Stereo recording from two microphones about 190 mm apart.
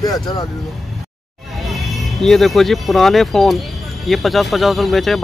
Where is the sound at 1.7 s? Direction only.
Centre (ahead or behind).